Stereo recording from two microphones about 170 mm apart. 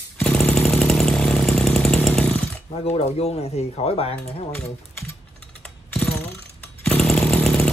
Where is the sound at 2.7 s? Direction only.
35° left (ahead or behind).